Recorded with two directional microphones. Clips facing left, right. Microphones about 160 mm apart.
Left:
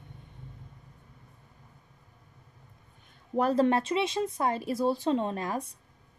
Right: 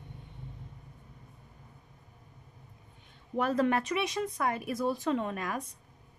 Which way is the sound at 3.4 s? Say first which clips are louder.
Left 3 dB; 35° left (ahead or behind).